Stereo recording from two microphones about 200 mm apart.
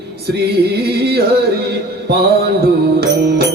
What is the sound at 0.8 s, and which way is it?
Music, 50° right (ahead or behind).